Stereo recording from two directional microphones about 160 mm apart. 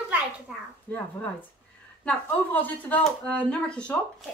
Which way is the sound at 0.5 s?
5° right (ahead or behind).